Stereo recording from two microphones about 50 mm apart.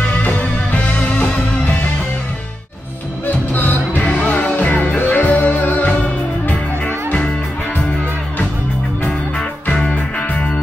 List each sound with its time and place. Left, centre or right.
0.2 s music: left
3.5 s music: left
4.0 s music: left
9.0 s music: left